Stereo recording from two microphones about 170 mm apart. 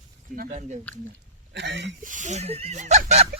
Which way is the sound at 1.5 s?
90° right.